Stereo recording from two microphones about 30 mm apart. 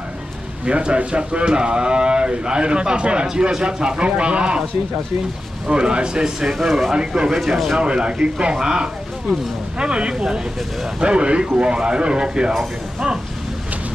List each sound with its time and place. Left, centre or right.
0.7 s speech: right
5.7 s speech: right
6.6 s speech: centre
6.9 s speech: right
7.3 s speech: centre
7.8 s speech: right
9.8 s speech: right